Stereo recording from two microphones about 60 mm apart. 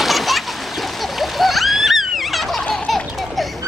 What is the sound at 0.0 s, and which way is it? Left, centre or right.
Splash, centre.